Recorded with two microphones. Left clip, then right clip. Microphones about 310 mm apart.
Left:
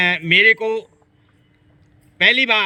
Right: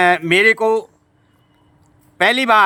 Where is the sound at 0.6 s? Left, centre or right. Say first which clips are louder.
Right 6 dB; centre.